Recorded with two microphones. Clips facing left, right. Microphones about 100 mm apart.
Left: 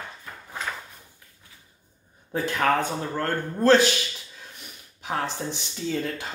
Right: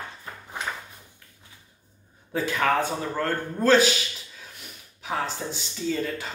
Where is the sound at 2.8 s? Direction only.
5° right (ahead or behind).